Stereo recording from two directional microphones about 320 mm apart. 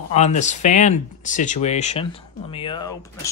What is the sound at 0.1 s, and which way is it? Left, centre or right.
Speech, left.